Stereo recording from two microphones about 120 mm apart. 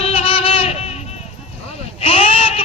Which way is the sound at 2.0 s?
55° left (ahead or behind).